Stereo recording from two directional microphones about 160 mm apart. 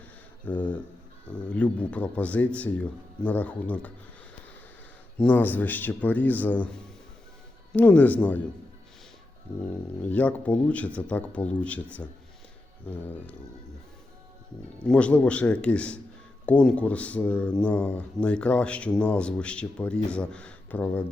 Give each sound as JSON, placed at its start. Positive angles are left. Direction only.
{"t": 0.4, "sound": "speech", "side_deg": 10}
{"t": 5.1, "sound": "speech", "side_deg": 10}
{"t": 9.5, "sound": "speech", "side_deg": -15}
{"t": 10.1, "sound": "speech", "side_deg": 10}
{"t": 14.8, "sound": "speech", "side_deg": 10}